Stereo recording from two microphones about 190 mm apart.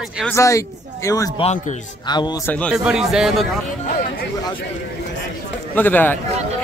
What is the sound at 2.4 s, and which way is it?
A man's voice, 5° left (ahead or behind).